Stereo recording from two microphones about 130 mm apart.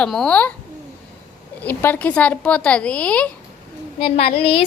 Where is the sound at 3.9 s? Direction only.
45° left (ahead or behind).